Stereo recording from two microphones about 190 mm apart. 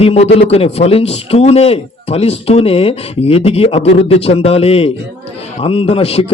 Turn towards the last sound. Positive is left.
turn(degrees=30)  # may be behind; listen again after turning